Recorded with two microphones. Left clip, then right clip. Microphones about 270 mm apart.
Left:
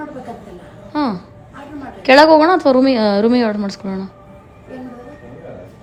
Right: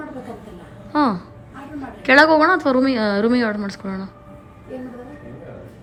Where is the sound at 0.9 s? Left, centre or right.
Centre.